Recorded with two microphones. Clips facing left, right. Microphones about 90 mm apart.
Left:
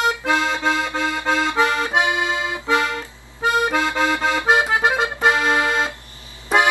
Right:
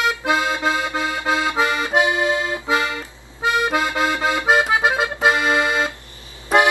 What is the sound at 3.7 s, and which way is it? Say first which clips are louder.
Accordion: even; 10° right (ahead or behind).